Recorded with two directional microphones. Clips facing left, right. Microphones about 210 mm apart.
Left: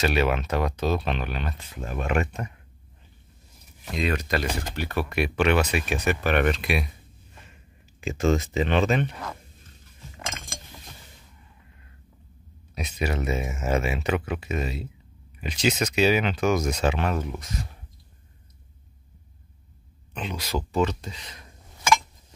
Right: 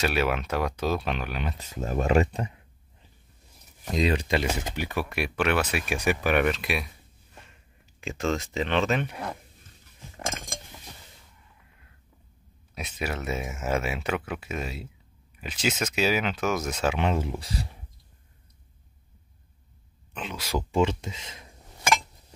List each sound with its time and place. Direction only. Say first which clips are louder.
0.0 s speech: left 2 dB; 5° right (ahead or behind)
1.9 s speech: right 4 dB; 35° right (ahead or behind)
3.9 s speech: right 2 dB; 35° right (ahead or behind)
4.6 s speech: left 1 dB; 15° right (ahead or behind)
8.0 s speech: left 5 dB; centre (ahead or behind)
12.7 s speech: left 4 dB; 5° right (ahead or behind)
17.0 s speech: right 1 dB; 25° right (ahead or behind)
20.2 s speech: left 1 dB; 5° right (ahead or behind)
20.7 s speech: right 1 dB; 25° right (ahead or behind)